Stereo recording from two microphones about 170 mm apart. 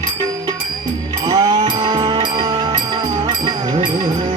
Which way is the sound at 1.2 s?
25° right (ahead or behind).